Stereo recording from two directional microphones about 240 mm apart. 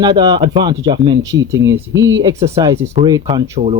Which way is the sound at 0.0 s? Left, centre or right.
Centre.